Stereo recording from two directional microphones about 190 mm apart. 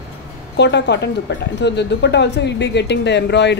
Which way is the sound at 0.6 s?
65° left (ahead or behind).